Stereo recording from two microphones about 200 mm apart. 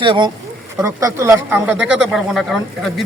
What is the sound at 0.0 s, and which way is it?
Speech, 25° right (ahead or behind).